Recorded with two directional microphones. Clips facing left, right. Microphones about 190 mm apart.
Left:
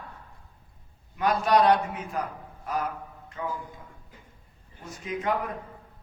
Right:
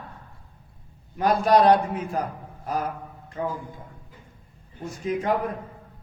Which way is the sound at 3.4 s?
35° right (ahead or behind).